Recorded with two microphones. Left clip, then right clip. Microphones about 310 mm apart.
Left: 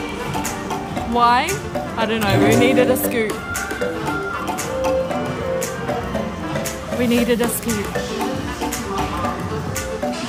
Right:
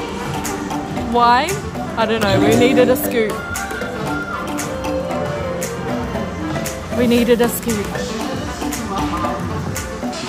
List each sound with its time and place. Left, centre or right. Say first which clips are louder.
1.1 s speech: right 2 dB; centre
7.0 s speech: right 4 dB; centre